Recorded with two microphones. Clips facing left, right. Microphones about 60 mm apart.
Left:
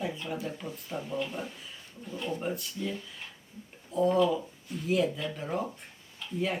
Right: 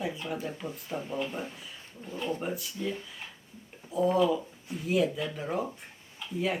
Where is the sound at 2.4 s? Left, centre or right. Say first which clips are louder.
Even; centre.